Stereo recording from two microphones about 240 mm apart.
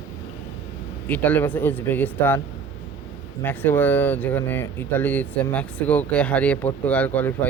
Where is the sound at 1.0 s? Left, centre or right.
Centre.